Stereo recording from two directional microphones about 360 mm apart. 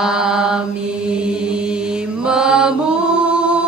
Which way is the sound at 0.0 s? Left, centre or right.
Centre.